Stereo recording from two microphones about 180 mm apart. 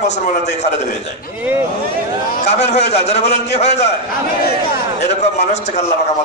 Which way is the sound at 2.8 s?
35° left (ahead or behind).